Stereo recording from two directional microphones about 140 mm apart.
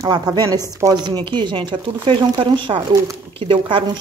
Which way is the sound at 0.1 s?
30° right (ahead or behind).